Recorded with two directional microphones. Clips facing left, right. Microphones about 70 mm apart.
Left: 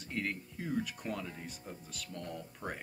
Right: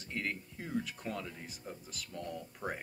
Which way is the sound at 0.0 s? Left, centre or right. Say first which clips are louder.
Left 1 dB; centre.